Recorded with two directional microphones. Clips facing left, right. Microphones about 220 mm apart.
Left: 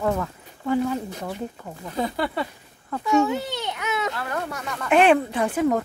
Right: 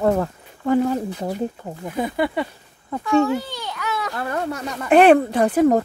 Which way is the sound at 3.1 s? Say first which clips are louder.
Right 3 dB; 20° left (ahead or behind).